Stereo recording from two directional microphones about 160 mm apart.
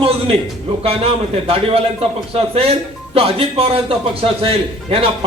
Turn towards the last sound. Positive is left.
turn(degrees=-35)  # may be behind; listen again after turning